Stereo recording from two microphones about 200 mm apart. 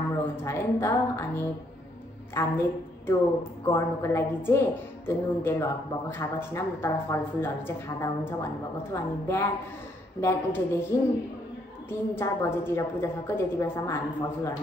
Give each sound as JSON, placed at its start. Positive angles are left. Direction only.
{"t": 0.4, "sound": "a woman's voice", "side_deg": 15}
{"t": 3.6, "sound": "a woman's voice", "side_deg": 15}